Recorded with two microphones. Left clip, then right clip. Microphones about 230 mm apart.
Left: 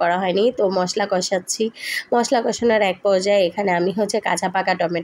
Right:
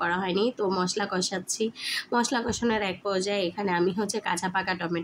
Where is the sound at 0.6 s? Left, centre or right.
Centre.